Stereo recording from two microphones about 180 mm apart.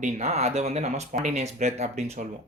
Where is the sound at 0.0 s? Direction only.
40° right (ahead or behind).